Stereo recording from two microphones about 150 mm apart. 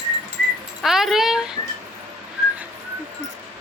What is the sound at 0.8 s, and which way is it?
Speech, centre (ahead or behind).